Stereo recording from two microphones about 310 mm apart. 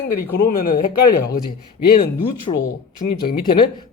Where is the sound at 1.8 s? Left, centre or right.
Left.